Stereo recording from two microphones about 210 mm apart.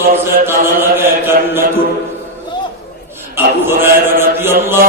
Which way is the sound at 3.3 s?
10° right (ahead or behind).